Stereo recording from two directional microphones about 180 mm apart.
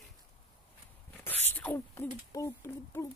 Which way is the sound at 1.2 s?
10° left (ahead or behind).